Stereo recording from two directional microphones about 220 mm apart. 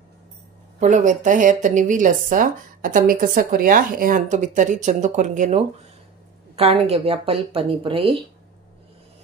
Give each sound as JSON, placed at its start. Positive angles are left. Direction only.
{"t": 0.7, "sound": "a woman's voice", "side_deg": -35}